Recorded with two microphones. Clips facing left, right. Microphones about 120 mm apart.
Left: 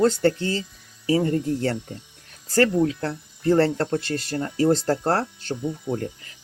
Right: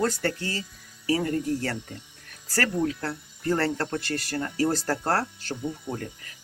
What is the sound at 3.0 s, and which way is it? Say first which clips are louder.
Speech: left 5 dB; 25° left (ahead or behind).